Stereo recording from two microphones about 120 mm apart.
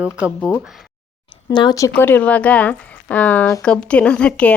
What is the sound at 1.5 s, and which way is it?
Speech, 40° left (ahead or behind).